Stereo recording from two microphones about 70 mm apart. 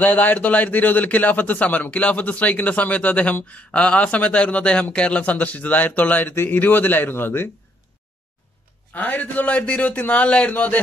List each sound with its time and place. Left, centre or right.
0.0 s a man's voice: left
8.9 s a man's voice: left